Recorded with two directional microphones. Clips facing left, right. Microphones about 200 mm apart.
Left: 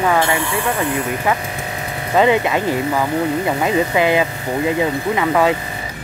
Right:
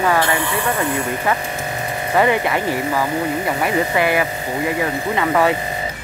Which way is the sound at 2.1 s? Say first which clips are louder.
Left 2 dB; 20° left (ahead or behind).